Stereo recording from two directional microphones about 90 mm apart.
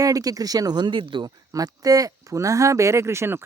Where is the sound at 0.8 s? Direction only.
65° right (ahead or behind).